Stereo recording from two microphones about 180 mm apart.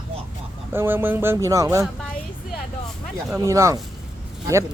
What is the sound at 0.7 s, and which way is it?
Speech, 10° right (ahead or behind).